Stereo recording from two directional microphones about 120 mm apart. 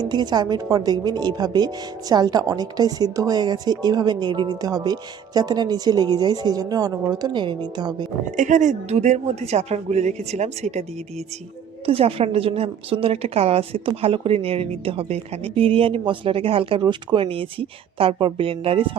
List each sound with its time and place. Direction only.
0.0 s speech: 35° right (ahead or behind)
8.4 s speech: 90° right; by 10.8 s 70° right (ahead or behind)
11.9 s a woman's voice: 50° right (ahead or behind)